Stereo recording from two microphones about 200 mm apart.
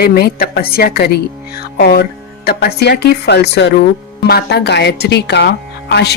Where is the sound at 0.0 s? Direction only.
50° left (ahead or behind).